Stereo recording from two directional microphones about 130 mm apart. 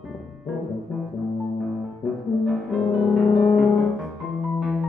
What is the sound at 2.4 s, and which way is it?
Music, centre (ahead or behind).